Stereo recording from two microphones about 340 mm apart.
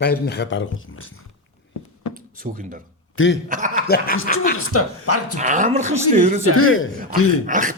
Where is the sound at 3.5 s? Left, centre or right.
Right.